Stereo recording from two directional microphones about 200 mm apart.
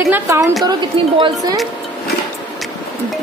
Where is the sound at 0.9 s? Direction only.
25° right (ahead or behind).